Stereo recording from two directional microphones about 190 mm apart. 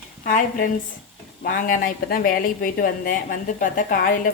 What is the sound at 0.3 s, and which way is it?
Speech, 45° left (ahead or behind).